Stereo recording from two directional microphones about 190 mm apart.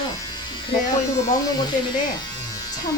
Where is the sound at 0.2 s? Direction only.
20° left (ahead or behind).